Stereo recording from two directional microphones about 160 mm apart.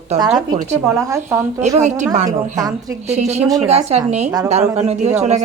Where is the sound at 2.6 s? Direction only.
25° right (ahead or behind).